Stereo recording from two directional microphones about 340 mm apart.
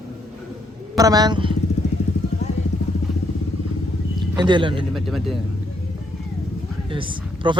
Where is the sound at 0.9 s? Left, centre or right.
Centre.